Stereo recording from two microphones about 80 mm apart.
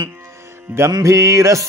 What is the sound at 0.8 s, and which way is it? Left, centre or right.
Music, right.